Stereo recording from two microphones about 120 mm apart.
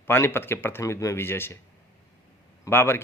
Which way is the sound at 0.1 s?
20° left (ahead or behind).